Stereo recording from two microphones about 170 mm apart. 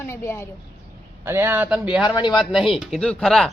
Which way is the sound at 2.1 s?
25° left (ahead or behind).